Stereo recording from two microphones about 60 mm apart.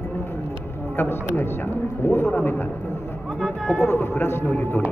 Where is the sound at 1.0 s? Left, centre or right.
Left.